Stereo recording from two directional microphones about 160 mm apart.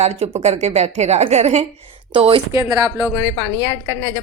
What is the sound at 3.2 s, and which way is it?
A woman's voice, 25° left (ahead or behind).